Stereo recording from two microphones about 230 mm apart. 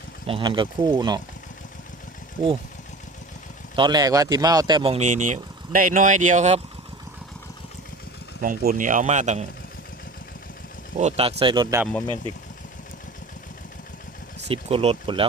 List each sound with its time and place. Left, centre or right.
0.3 s speech: right
3.8 s speech: centre
8.4 s speech: right
10.9 s speech: right
14.4 s speech: right